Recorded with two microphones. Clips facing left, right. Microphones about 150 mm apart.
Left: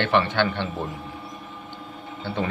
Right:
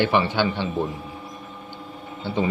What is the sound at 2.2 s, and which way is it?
Speech, 10° right (ahead or behind).